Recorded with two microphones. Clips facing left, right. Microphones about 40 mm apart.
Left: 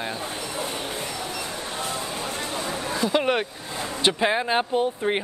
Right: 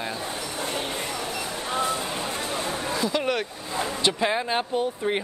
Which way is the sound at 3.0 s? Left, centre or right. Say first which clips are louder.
Left 5 dB; left.